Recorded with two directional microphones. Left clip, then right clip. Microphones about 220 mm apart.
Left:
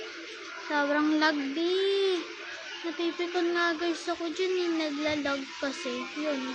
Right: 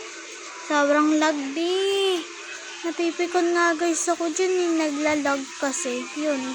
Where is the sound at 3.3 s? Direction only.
15° right (ahead or behind).